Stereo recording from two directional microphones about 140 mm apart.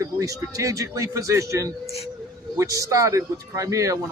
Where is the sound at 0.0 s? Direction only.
25° right (ahead or behind).